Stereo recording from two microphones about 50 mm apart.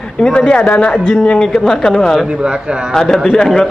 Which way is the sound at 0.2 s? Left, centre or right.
Centre.